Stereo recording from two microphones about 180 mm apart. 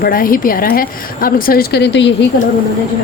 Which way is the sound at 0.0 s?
50° left (ahead or behind).